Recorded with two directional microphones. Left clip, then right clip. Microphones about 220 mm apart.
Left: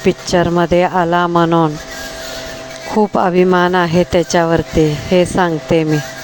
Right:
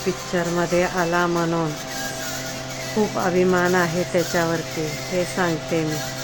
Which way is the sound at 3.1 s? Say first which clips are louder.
Left 8 dB; 45° left (ahead or behind).